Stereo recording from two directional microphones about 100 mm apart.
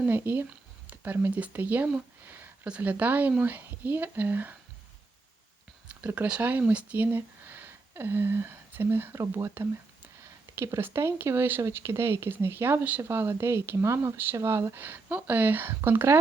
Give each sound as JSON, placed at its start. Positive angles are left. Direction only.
{"t": 0.0, "sound": "speech", "side_deg": -20}
{"t": 5.9, "sound": "speech", "side_deg": -15}